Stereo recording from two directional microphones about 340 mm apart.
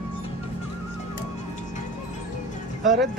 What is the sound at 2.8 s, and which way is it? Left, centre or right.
Speech, right.